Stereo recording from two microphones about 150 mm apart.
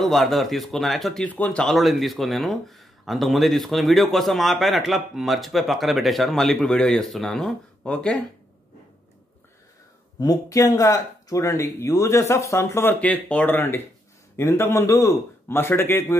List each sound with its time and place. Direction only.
0.0 s speech: centre (ahead or behind)
10.1 s a man's voice: 25° left (ahead or behind)